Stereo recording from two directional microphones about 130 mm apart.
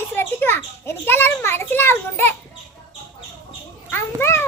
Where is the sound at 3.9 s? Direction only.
20° left (ahead or behind).